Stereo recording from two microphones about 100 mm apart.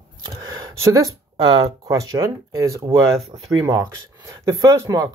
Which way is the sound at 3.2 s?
90° right.